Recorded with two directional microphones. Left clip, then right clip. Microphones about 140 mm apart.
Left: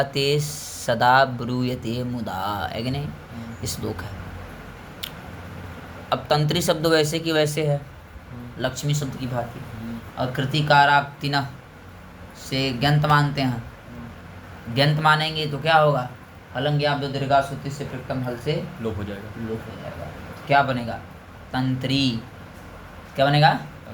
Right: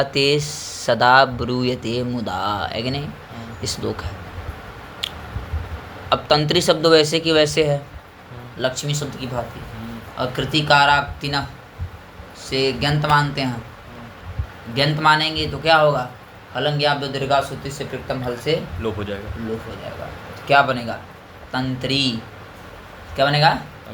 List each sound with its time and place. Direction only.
0.0 s speech: 5° right (ahead or behind)
6.1 s speech: 10° right (ahead or behind)
8.5 s speech: 5° left (ahead or behind)
12.5 s a man's voice: 15° left (ahead or behind)
14.7 s a man's voice: 15° left (ahead or behind); by 19.2 s 10° right (ahead or behind)
20.5 s a man's voice: centre (ahead or behind)
23.1 s a man's voice: 15° left (ahead or behind)